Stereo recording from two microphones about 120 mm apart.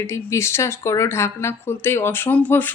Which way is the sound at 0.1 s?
25° left (ahead or behind).